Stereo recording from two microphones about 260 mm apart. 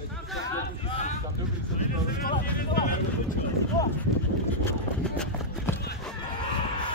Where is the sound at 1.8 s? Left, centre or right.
Left.